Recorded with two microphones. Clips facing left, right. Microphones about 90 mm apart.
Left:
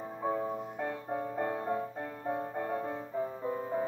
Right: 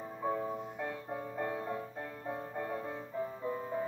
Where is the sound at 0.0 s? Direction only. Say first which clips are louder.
Left 2 dB; 25° left (ahead or behind).